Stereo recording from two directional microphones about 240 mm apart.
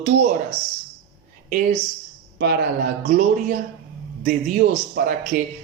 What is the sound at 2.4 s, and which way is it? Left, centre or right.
Speech, right.